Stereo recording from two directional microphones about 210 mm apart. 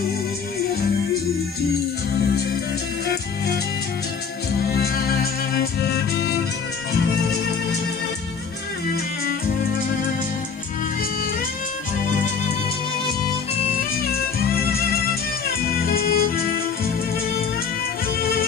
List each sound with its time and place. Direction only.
3.1 s music: 50° left (ahead or behind)
14.1 s music: 45° left (ahead or behind)